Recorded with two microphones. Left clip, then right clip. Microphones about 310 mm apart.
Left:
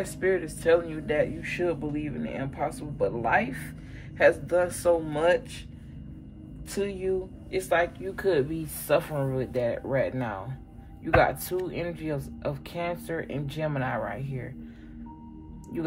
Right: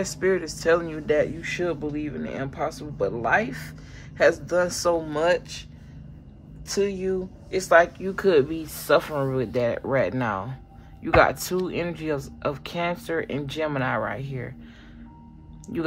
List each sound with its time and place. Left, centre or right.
0.0 s speech: centre
6.7 s speech: centre